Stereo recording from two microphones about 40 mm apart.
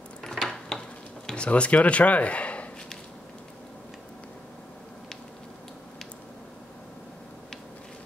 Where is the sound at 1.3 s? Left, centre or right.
Left.